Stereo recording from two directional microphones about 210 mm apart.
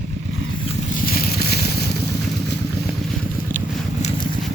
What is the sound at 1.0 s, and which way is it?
Vehicle, 45° left (ahead or behind).